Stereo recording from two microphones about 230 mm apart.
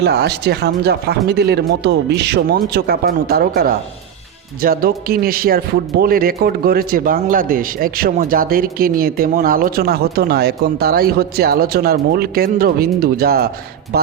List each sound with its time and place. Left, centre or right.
0.0 s a man's voice: right